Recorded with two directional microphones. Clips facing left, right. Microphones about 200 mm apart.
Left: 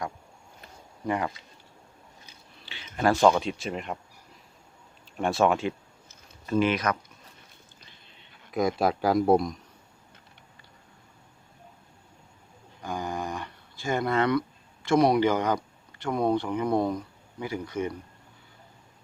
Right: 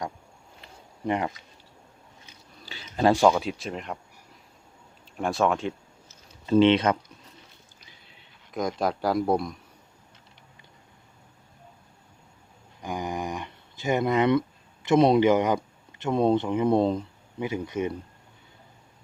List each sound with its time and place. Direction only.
1.0 s speech: 25° right (ahead or behind)
2.6 s a sound: 40° right (ahead or behind)
3.1 s speech: 10° right (ahead or behind)
5.1 s speech: centre (ahead or behind)
6.4 s speech: 25° right (ahead or behind)
8.5 s speech: 5° left (ahead or behind)
12.8 s a sound: 15° right (ahead or behind)
14.8 s speech: 25° right (ahead or behind)